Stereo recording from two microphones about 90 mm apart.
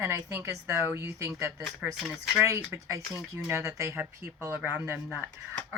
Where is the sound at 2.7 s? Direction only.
30° right (ahead or behind).